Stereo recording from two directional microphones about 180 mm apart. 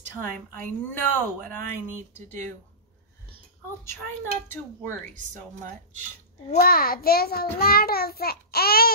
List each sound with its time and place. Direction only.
0.2 s speech: 10° left (ahead or behind)
1.6 s speech: 45° right (ahead or behind)
6.5 s a child's voice: 55° left (ahead or behind)